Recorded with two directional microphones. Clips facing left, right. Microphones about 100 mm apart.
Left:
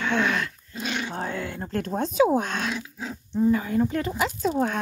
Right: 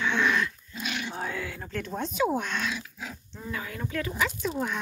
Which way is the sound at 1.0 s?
30° left (ahead or behind).